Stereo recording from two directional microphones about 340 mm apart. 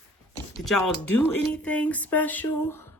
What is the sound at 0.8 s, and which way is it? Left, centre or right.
Speech, left.